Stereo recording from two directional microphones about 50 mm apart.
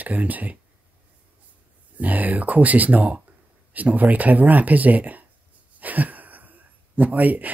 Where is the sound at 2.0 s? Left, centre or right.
Right.